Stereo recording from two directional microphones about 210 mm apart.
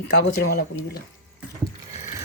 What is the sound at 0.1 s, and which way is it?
Speech, 50° left (ahead or behind).